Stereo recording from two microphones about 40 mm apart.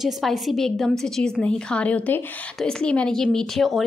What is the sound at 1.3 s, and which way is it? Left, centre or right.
Speech, left.